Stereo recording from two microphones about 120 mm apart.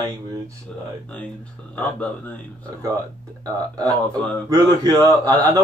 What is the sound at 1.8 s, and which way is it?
Speech, 10° left (ahead or behind).